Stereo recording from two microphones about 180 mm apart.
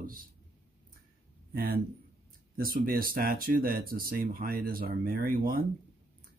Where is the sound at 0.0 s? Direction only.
50° right (ahead or behind).